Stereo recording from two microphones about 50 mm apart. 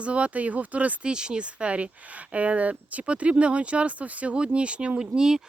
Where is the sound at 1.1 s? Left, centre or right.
Centre.